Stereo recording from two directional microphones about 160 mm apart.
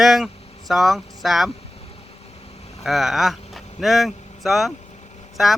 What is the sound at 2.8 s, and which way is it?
Speech, centre (ahead or behind).